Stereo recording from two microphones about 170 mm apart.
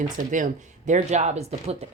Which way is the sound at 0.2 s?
50° right (ahead or behind).